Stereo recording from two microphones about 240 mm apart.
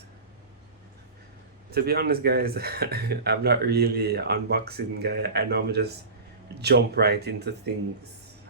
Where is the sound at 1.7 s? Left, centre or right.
Right.